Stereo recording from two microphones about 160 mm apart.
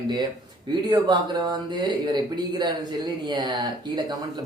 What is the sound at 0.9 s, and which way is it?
Speech, 30° right (ahead or behind).